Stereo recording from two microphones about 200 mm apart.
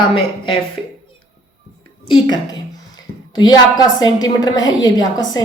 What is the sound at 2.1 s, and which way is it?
A woman's voice, 20° left (ahead or behind).